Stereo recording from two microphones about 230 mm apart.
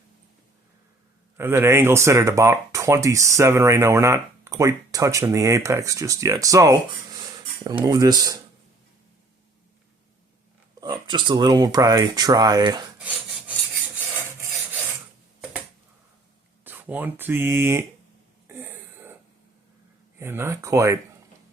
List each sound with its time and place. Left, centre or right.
1.4 s speech: centre
11.1 s speech: centre
13.0 s filing: centre
16.6 s speech: centre
18.4 s a sound: centre
20.1 s speech: centre